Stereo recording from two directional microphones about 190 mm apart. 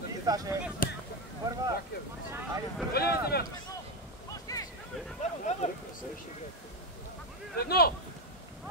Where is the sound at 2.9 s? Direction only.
55° left (ahead or behind).